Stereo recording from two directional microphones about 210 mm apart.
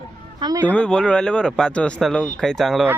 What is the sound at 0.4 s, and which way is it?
Speech, 15° right (ahead or behind).